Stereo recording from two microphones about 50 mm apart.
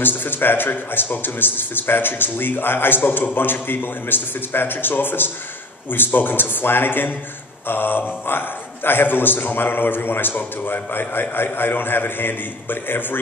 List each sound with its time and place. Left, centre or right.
0.0 s a man's voice: left